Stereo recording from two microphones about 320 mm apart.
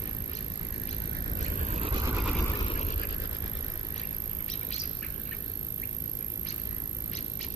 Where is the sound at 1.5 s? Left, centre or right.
Right; by 2.4 s centre.